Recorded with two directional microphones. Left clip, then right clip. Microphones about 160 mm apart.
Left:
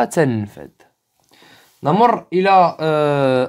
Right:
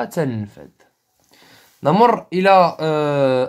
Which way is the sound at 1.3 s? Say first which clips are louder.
Left 1 dB; 15° left (ahead or behind).